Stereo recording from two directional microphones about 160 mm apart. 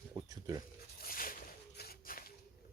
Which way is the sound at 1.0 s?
65° left (ahead or behind).